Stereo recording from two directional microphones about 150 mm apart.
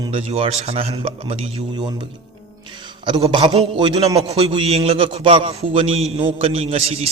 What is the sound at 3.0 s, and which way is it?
A man's voice, 30° right (ahead or behind).